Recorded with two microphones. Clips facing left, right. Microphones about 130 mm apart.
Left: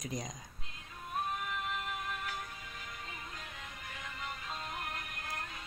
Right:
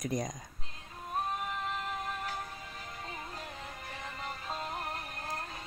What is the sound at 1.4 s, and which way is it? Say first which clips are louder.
Music: right 2 dB; 35° right (ahead or behind).